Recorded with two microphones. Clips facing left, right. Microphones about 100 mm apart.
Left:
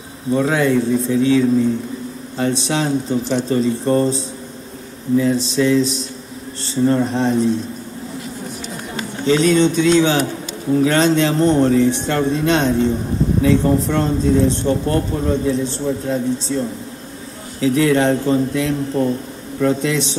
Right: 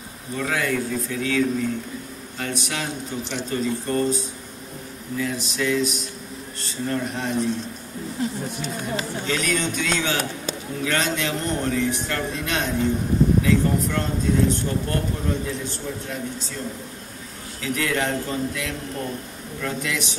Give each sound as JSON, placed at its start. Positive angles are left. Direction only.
{"t": 0.3, "sound": "speech", "side_deg": 30}
{"t": 9.3, "sound": "speech", "side_deg": 30}